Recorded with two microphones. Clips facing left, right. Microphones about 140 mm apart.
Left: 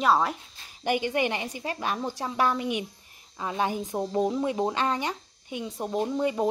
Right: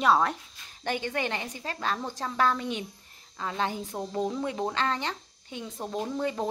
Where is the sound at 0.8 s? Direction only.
15° left (ahead or behind).